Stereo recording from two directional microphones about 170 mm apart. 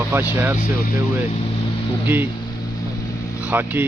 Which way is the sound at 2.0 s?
10° right (ahead or behind).